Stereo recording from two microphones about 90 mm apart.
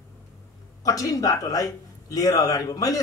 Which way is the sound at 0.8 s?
40° left (ahead or behind).